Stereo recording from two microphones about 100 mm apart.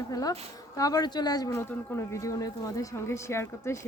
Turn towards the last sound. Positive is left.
turn(degrees=25)  # may be behind; listen again after turning